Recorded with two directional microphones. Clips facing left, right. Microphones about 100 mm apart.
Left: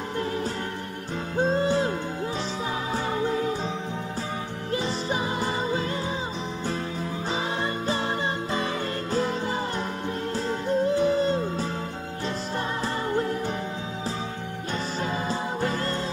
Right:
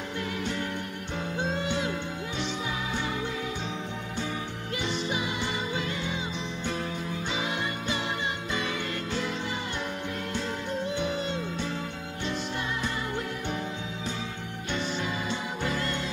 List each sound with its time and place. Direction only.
1.4 s music: 35° left (ahead or behind)
4.7 s music: 40° left (ahead or behind)
7.6 s music: 35° left (ahead or behind)
10.3 s music: 35° left (ahead or behind)
15.2 s music: 35° left (ahead or behind)